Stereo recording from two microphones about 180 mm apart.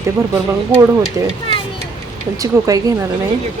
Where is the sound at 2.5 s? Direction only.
15° right (ahead or behind).